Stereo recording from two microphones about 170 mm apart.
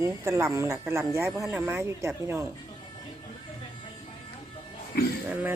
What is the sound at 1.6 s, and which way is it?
Speech, 15° right (ahead or behind).